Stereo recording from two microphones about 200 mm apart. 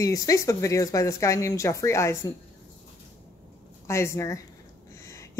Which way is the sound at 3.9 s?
15° left (ahead or behind).